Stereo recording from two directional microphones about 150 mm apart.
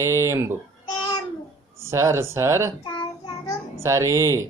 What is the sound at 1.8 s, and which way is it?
Speech, 20° right (ahead or behind).